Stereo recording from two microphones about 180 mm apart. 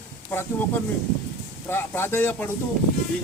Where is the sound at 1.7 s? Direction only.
15° left (ahead or behind).